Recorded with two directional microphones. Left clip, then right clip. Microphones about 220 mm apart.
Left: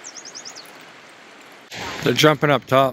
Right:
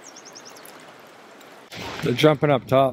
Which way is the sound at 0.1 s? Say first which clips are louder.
Left 5 dB; 45° right (ahead or behind).